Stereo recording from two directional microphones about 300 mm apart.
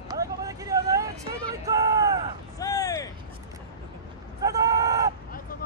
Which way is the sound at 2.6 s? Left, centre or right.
Centre.